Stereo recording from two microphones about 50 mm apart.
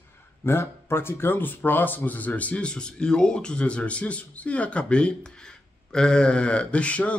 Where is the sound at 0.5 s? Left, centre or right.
Left.